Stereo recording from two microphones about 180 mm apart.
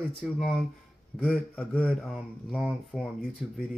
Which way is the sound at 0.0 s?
5° left (ahead or behind).